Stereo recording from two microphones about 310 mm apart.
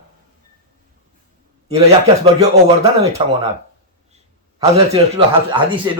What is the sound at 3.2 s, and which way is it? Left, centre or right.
Speech, centre.